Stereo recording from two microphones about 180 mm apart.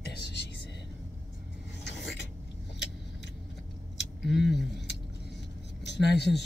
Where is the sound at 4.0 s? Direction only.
70° left (ahead or behind).